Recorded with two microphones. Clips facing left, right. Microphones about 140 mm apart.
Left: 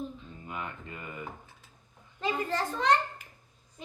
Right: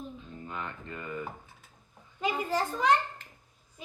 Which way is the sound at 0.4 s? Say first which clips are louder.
Even; 10° left (ahead or behind).